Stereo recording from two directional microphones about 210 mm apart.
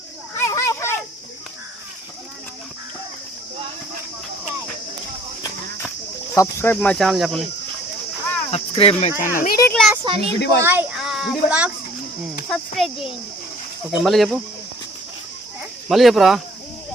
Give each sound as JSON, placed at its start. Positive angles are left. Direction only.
{"t": 0.3, "sound": "children playing", "side_deg": 15}
{"t": 6.3, "sound": "speech", "side_deg": 15}
{"t": 8.4, "sound": "speech", "side_deg": 30}
{"t": 9.6, "sound": "a child's voice", "side_deg": 10}
{"t": 10.0, "sound": "a child's voice", "side_deg": -25}
{"t": 10.6, "sound": "a child's voice", "side_deg": -10}
{"t": 15.9, "sound": "speech", "side_deg": 0}